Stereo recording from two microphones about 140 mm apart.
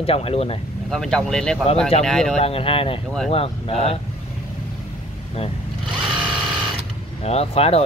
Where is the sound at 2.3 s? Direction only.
45° left (ahead or behind).